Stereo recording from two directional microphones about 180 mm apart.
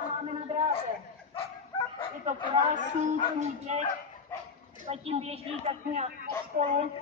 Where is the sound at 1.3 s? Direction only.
30° left (ahead or behind).